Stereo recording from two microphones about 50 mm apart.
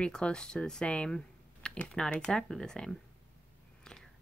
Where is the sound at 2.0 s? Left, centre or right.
Centre.